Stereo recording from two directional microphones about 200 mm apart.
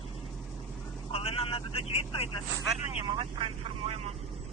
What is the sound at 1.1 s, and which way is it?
Vehicle, 30° left (ahead or behind).